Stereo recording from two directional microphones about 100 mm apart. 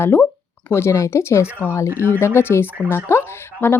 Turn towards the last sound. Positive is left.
turn(degrees=25)  # may be behind; listen again after turning